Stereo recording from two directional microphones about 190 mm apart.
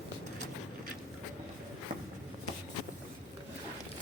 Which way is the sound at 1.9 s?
45° right (ahead or behind).